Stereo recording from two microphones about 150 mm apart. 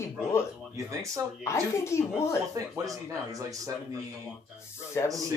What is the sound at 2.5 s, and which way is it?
Speech, 20° right (ahead or behind).